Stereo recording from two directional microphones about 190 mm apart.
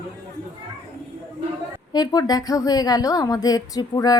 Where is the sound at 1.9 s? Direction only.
20° left (ahead or behind).